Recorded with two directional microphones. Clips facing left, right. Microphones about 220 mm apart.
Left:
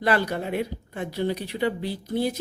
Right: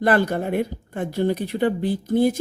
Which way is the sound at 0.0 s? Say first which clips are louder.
Right 4 dB; 50° right (ahead or behind).